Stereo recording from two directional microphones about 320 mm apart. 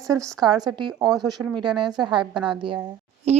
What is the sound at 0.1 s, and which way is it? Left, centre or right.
Speech, centre.